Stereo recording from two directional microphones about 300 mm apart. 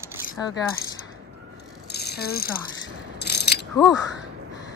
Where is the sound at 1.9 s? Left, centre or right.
Left.